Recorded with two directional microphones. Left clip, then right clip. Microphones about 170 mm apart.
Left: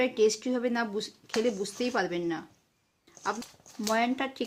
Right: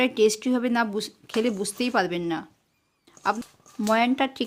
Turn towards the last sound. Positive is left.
turn(degrees=-55)  # may be behind; listen again after turning